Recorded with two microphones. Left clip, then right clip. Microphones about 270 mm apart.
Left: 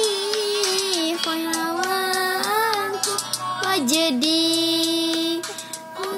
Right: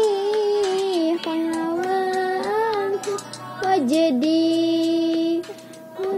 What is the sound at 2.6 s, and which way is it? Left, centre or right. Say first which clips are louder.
Music: even; centre.